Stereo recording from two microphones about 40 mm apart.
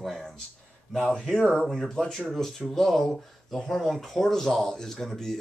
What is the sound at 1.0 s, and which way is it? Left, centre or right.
A man's voice, centre.